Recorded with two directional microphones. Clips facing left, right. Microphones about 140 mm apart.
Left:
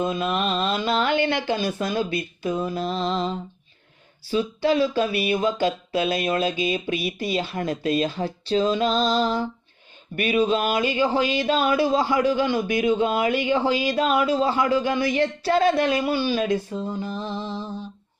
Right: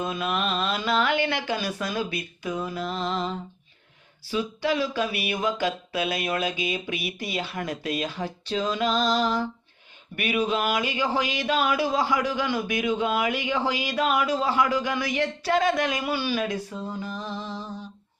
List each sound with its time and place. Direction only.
0.0 s speech: 25° left (ahead or behind)